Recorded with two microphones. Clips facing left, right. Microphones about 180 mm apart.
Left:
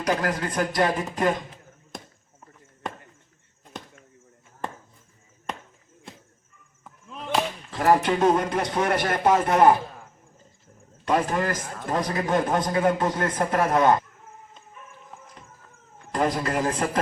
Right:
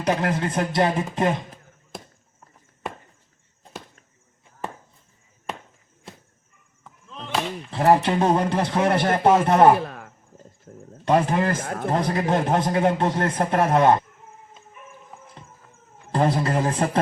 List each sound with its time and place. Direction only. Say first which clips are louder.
0.0 s a man's voice: right 2 dB; 25° right (ahead or behind)
5.5 s chop: right 1 dB; 5° right (ahead or behind)
7.7 s a man's voice: right 2 dB; 30° right (ahead or behind)
9.7 s a sound: right 5 dB; 70° right (ahead or behind)
10.7 s a sound: right 13 dB; 50° right (ahead or behind)
11.0 s a man's voice: right 3 dB; 30° right (ahead or behind)
11.6 s a man's voice: right 8 dB; 55° right (ahead or behind)
11.9 s a man's voice: right 2 dB; 30° right (ahead or behind)
16.1 s a man's voice: right 3 dB; 30° right (ahead or behind)